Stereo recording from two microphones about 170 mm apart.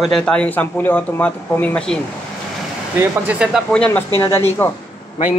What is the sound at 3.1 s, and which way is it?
Speech, 10° right (ahead or behind).